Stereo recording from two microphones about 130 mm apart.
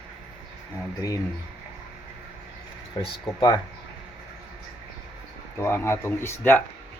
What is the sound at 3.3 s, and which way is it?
Speech, 30° left (ahead or behind).